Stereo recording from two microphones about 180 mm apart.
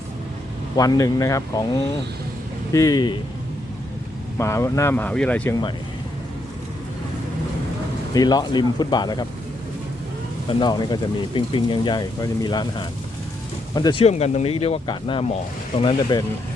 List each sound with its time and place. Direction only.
0.8 s speech: 20° left (ahead or behind)
2.7 s speech: 20° left (ahead or behind)
4.4 s speech: 15° left (ahead or behind)
8.1 s speech: 20° left (ahead or behind)
10.6 s speech: 25° left (ahead or behind)
14.0 s speech: 35° left (ahead or behind)